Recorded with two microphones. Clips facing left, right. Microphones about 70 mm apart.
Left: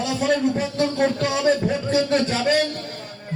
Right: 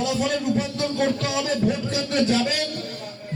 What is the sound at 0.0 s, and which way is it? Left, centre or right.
A man's voice, left.